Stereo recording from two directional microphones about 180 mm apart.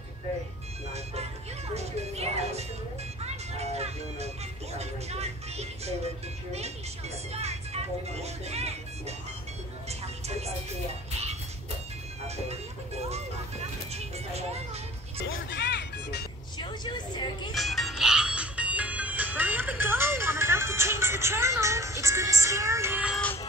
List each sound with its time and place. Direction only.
1.7 s music: 35° right (ahead or behind)
7.3 s music: 35° right (ahead or behind)
13.9 s music: 35° right (ahead or behind)
15.2 s music: 90° left; by 16.3 s 70° left (ahead or behind)
16.5 s vehicle: 25° left (ahead or behind)
17.6 s music: centre (ahead or behind)
23.1 s music: 10° left (ahead or behind)